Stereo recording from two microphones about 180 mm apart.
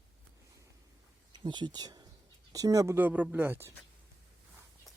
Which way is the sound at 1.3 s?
25° right (ahead or behind).